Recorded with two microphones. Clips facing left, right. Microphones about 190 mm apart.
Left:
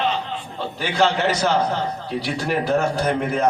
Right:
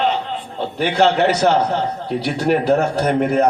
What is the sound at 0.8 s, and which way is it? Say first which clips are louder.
A man's voice: right 5 dB; 60° right (ahead or behind).